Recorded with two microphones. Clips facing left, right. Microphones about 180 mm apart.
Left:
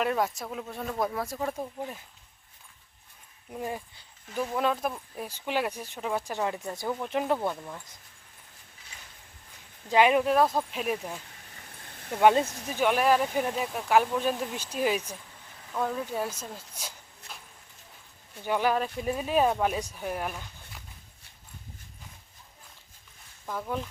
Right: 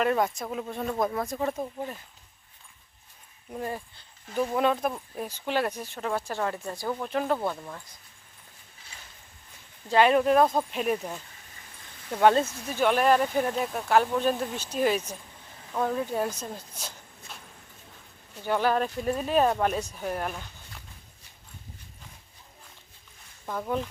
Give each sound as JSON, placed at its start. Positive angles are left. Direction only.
{"t": 0.0, "sound": "speech", "side_deg": 5}
{"t": 3.5, "sound": "speech", "side_deg": 10}
{"t": 4.5, "sound": "speech", "side_deg": 0}
{"t": 5.3, "sound": "speech", "side_deg": 10}
{"t": 7.3, "sound": "speech", "side_deg": 5}
{"t": 9.9, "sound": "speech", "side_deg": 10}
{"t": 12.2, "sound": "speech", "side_deg": 10}
{"t": 15.7, "sound": "speech", "side_deg": -5}
{"t": 18.4, "sound": "speech", "side_deg": 10}
{"t": 23.5, "sound": "speech", "side_deg": -5}